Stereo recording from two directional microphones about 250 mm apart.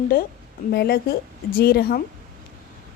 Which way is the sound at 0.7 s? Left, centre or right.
Left.